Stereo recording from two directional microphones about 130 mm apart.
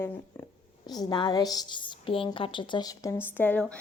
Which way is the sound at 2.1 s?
45° left (ahead or behind).